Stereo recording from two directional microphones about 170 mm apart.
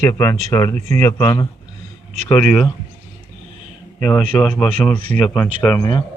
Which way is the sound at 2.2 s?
5° left (ahead or behind).